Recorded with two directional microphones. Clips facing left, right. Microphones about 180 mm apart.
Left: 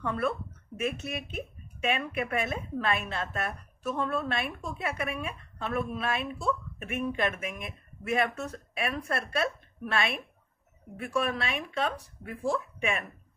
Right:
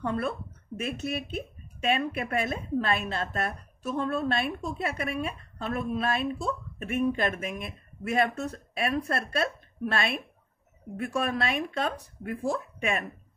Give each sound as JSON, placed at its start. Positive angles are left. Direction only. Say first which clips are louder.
{"t": 0.0, "sound": "speech", "louder": "even", "side_deg": -35}